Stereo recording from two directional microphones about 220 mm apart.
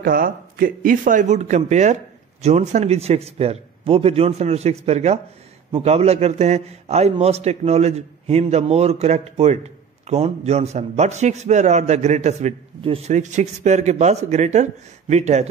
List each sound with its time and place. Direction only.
0.0 s a man's voice: 40° right (ahead or behind)